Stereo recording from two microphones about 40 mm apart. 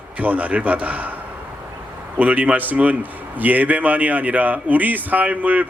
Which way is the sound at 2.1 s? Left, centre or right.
Right.